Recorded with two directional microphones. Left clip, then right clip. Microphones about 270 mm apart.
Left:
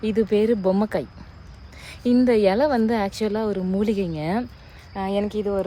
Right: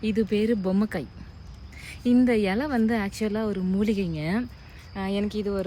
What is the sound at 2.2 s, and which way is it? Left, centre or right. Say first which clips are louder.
A woman's voice: left 7 dB; centre.